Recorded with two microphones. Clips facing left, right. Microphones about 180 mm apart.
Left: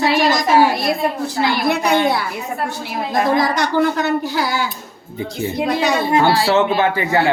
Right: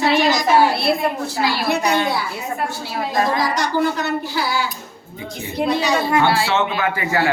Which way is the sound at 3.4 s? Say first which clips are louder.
Left 3 dB; 55° left (ahead or behind).